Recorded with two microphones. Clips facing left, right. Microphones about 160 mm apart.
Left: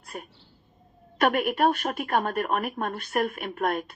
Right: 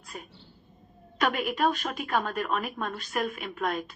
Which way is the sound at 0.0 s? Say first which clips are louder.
Left 3 dB; 55° left (ahead or behind).